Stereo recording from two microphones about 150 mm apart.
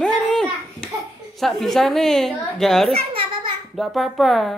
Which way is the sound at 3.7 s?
Centre (ahead or behind).